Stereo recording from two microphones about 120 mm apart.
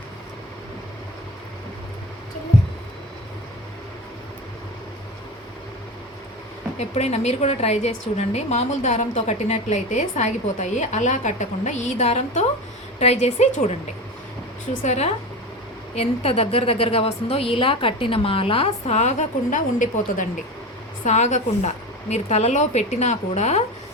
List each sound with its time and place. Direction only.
6.7 s a woman's voice: 65° left (ahead or behind)
16.0 s a woman's voice: 55° left (ahead or behind); by 21.7 s 75° left (ahead or behind)
22.1 s a woman's voice: 65° left (ahead or behind)